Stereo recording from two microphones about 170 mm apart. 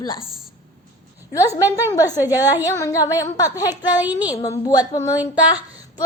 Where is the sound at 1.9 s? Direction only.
20° left (ahead or behind).